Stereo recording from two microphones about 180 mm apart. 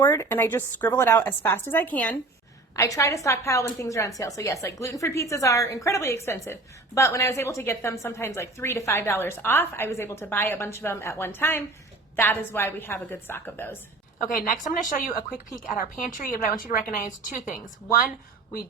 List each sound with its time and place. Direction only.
0.0 s a woman's voice: 15° left (ahead or behind)
14.3 s speech: 50° left (ahead or behind)